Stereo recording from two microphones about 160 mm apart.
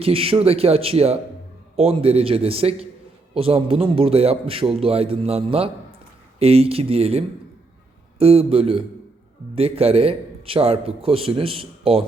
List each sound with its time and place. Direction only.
0.0 s a man's voice: 35° right (ahead or behind)